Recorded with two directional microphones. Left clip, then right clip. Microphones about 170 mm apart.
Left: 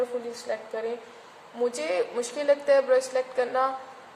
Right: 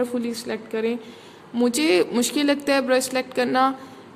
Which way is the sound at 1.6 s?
65° right (ahead or behind).